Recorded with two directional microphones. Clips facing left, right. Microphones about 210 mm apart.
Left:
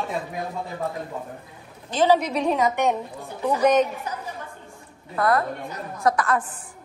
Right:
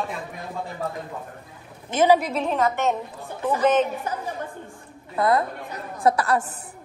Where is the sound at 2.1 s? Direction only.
Centre (ahead or behind).